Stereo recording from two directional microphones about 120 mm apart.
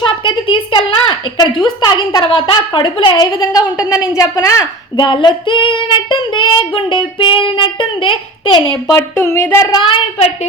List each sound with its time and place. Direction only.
0.0 s a sound: 45° left (ahead or behind)
1.6 s a woman's voice: 40° left (ahead or behind)
4.9 s child singing: 40° left (ahead or behind)
9.0 s speech: 20° left (ahead or behind)